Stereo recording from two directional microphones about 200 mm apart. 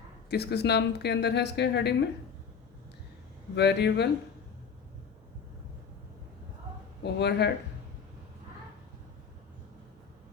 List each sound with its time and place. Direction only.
0.3 s a woman's voice: 55° left (ahead or behind)
3.5 s a woman's voice: 60° left (ahead or behind)
7.0 s a woman's voice: 55° left (ahead or behind)